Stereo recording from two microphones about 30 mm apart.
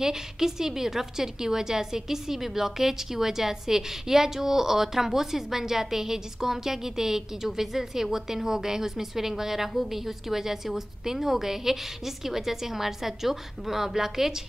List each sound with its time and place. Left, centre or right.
0.0 s a woman's voice: centre